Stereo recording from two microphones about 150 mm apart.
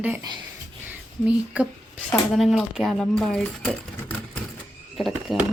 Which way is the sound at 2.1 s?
Centre (ahead or behind).